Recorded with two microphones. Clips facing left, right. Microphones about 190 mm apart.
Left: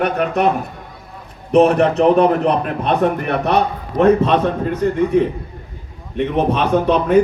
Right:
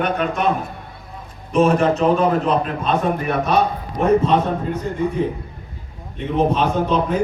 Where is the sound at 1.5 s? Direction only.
65° left (ahead or behind).